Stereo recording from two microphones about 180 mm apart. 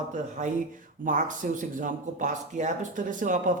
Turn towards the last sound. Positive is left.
turn(degrees=-45)  # may be behind; listen again after turning